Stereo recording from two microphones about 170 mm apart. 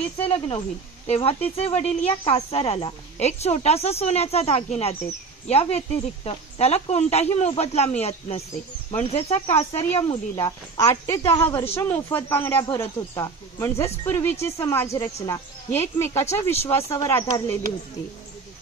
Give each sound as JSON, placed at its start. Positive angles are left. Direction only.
{"t": 0.2, "sound": "a woman's voice", "side_deg": 35}
{"t": 10.4, "sound": "speech", "side_deg": 20}
{"t": 11.4, "sound": "a woman's voice", "side_deg": 35}
{"t": 11.8, "sound": "speech", "side_deg": 15}